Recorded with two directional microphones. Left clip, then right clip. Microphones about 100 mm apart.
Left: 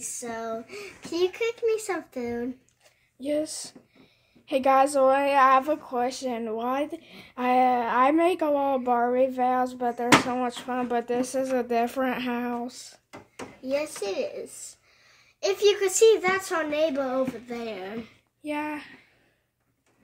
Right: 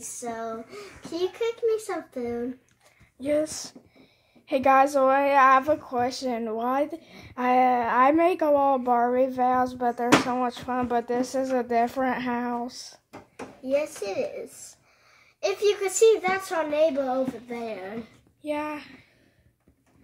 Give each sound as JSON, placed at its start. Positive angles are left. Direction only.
{"t": 0.2, "sound": "a child's voice", "side_deg": 65}
{"t": 3.2, "sound": "a woman's voice", "side_deg": 30}
{"t": 6.2, "sound": "a woman's voice", "side_deg": 10}
{"t": 13.7, "sound": "speech", "side_deg": 50}
{"t": 15.4, "sound": "a child's voice", "side_deg": 90}
{"t": 18.4, "sound": "a child's voice", "side_deg": 40}